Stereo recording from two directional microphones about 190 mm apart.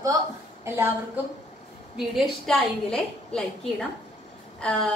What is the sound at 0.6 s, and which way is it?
Speech, 10° right (ahead or behind).